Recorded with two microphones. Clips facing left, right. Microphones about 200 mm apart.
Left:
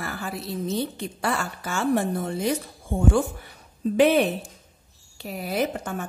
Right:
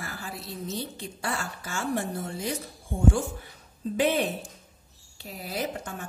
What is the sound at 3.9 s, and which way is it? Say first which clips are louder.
A woman's voice: left 6 dB; 70° left (ahead or behind).